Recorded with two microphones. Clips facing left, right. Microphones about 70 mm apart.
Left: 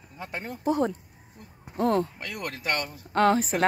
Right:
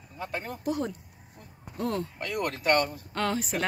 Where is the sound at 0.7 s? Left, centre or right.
Left.